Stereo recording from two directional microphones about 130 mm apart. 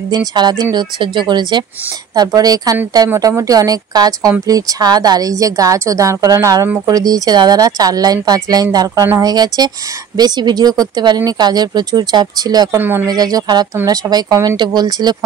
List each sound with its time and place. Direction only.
0.3 s a woman's voice: 30° right (ahead or behind)
12.7 s speech: 15° right (ahead or behind)
13.1 s speech: 30° right (ahead or behind)